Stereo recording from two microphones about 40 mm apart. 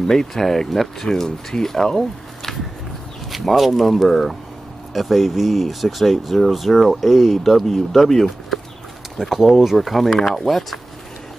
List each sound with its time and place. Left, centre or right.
0.0 s speech: centre
1.0 s speech: centre
3.3 s speech: centre